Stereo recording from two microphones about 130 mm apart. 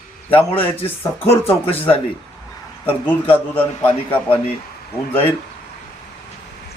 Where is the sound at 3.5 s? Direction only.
15° left (ahead or behind).